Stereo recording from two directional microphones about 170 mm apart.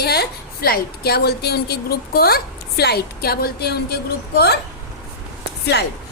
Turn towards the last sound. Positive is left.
turn(degrees=80)